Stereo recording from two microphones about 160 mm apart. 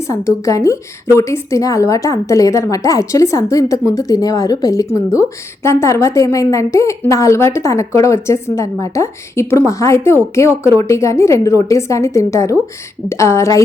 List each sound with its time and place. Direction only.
0.1 s a woman's voice: 20° left (ahead or behind)